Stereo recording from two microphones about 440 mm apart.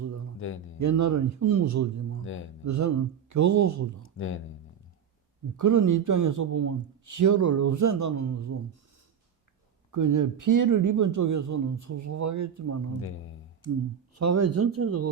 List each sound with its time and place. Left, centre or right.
0.4 s speech: left
0.8 s speech: right
5.5 s speech: right
9.9 s speech: right
14.2 s speech: right